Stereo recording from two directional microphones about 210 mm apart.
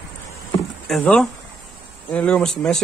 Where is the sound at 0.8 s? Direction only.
5° left (ahead or behind).